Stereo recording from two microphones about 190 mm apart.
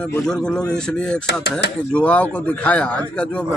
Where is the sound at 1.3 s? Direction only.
60° left (ahead or behind).